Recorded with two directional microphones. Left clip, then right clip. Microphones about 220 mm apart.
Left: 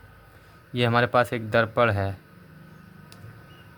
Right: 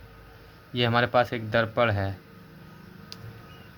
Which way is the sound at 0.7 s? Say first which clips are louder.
Left 2 dB; 20° left (ahead or behind).